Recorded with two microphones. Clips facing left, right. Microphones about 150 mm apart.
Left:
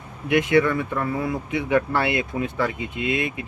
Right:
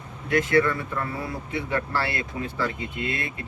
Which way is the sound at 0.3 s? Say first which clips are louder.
Left 3 dB; 20° left (ahead or behind).